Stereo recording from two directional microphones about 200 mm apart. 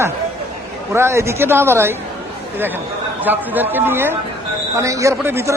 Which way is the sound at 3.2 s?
10° right (ahead or behind).